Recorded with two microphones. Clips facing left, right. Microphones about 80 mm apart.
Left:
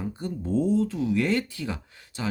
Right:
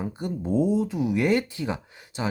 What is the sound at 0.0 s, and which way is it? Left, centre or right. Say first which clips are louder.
Speech: right 2 dB; centre.